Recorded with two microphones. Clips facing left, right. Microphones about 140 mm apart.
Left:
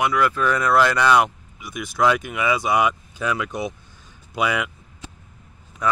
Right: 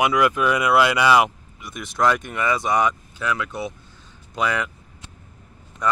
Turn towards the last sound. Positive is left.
turn(degrees=5)  # may be behind; listen again after turning